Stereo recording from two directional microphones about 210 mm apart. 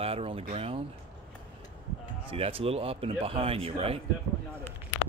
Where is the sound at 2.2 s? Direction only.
25° right (ahead or behind).